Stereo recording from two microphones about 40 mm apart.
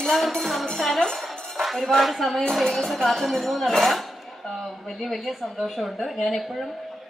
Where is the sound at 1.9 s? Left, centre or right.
Centre.